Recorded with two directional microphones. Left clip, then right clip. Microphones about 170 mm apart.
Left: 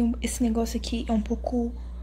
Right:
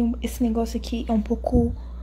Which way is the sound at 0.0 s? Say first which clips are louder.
Right 2 dB; 5° right (ahead or behind).